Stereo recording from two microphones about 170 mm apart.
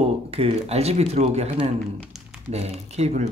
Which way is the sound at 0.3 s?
35° right (ahead or behind).